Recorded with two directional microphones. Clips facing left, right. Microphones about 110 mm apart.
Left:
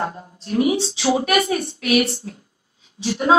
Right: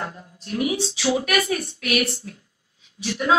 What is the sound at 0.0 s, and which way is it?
A woman's voice, 30° left (ahead or behind).